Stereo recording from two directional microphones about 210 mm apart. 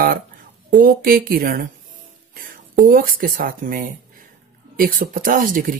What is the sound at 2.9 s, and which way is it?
Speech, 45° right (ahead or behind).